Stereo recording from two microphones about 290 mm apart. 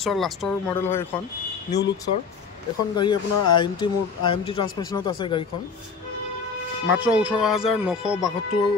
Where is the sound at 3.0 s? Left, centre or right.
Centre.